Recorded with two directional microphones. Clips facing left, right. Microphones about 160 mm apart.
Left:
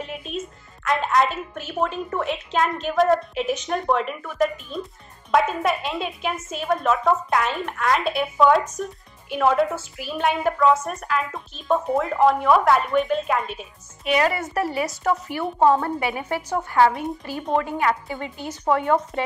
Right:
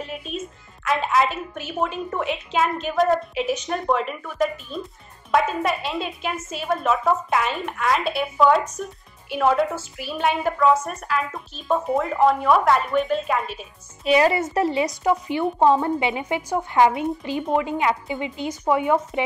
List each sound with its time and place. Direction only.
0.0 s music: centre (ahead or behind)
0.8 s a woman's voice: centre (ahead or behind)
14.0 s a woman's voice: 25° right (ahead or behind); by 18.9 s 10° right (ahead or behind)